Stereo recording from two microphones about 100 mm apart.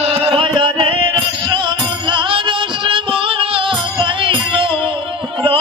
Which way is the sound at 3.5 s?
60° right (ahead or behind).